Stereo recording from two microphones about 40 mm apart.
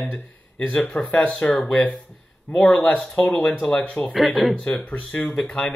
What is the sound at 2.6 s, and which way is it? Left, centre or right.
Speech, left.